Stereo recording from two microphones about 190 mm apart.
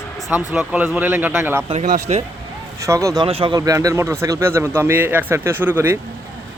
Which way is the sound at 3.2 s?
30° right (ahead or behind).